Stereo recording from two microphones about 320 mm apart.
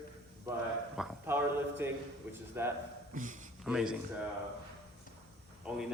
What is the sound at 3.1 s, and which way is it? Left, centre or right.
Speech, right.